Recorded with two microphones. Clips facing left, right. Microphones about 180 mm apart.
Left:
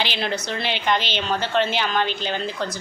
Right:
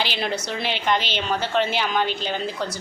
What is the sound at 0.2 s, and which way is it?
A woman's voice, 5° right (ahead or behind).